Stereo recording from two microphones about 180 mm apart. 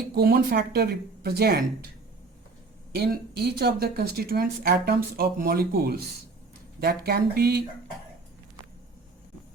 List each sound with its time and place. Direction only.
0.1 s speech: 60° right (ahead or behind)
3.0 s speech: 65° right (ahead or behind)